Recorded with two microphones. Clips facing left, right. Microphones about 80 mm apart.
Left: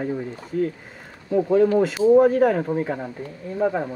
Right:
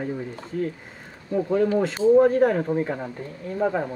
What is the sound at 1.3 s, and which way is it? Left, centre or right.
Speech, centre.